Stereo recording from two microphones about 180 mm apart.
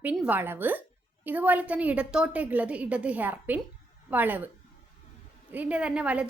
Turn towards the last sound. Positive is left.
turn(degrees=-5)  # may be behind; listen again after turning